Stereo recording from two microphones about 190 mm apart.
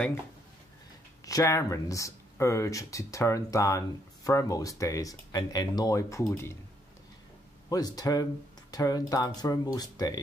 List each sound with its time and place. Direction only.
1.2 s speech: 15° left (ahead or behind)
7.7 s speech: 20° left (ahead or behind)